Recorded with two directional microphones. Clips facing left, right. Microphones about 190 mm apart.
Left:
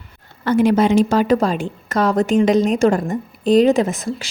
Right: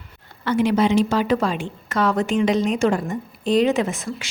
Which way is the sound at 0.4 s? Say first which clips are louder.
Left 4 dB; 45° left (ahead or behind).